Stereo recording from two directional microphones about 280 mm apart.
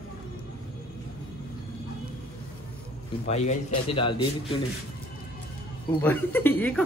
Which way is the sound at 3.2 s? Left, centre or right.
Left.